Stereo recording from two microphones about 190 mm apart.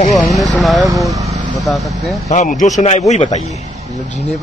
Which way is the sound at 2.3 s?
40° left (ahead or behind).